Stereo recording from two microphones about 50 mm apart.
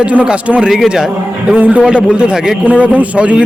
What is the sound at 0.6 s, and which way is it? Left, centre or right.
Speech, centre.